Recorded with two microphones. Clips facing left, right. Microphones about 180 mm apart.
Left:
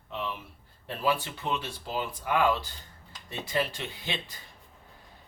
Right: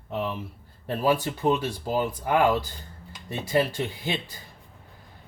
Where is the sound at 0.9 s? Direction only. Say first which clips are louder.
Right 5 dB; 40° right (ahead or behind).